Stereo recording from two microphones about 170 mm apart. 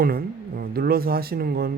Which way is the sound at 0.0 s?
60° right (ahead or behind).